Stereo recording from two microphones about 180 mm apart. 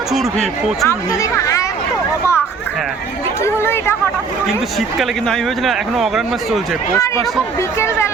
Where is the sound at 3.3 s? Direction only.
15° left (ahead or behind).